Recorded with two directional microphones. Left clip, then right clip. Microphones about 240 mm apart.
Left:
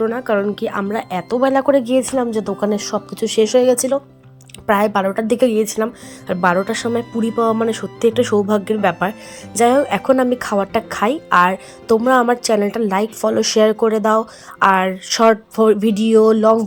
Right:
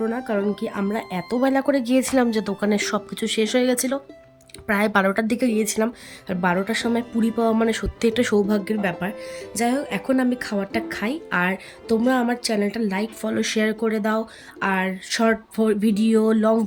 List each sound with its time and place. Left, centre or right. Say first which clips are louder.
0.0 s a woman's voice: left 6 dB; centre
2.0 s a woman's voice: left 2 dB; centre
2.4 s a woman's voice: left 3 dB; centre
16.1 s a woman's voice: left 9 dB; centre